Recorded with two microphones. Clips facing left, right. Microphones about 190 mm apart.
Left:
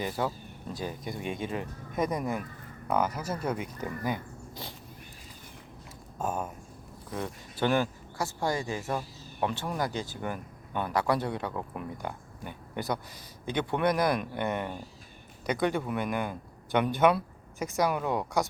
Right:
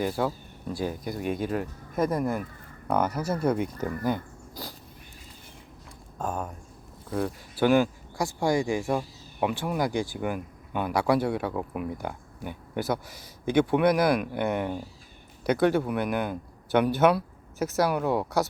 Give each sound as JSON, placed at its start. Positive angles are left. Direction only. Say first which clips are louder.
{"t": 0.0, "sound": "speech", "louder": "right 4 dB", "side_deg": -5}
{"t": 2.9, "sound": "speech", "louder": "right 3 dB", "side_deg": 10}
{"t": 3.2, "sound": "speech", "louder": "right 6 dB", "side_deg": -10}
{"t": 3.5, "sound": "speech", "louder": "right 6 dB", "side_deg": 10}
{"t": 6.1, "sound": "speech", "louder": "right 1 dB", "side_deg": 5}
{"t": 7.1, "sound": "a man's voice", "louder": "right 6 dB", "side_deg": -10}